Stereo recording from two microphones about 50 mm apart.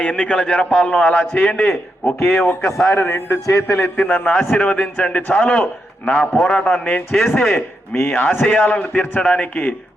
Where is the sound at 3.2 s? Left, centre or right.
Left.